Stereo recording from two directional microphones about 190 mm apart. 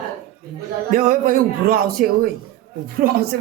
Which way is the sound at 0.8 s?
50° right (ahead or behind).